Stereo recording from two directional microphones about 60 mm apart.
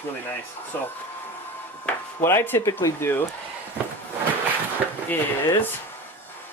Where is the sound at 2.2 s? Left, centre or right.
Left.